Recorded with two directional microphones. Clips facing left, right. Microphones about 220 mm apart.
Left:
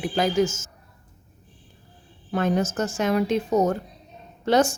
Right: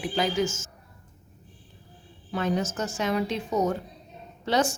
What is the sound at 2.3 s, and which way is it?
A woman's voice, 50° left (ahead or behind).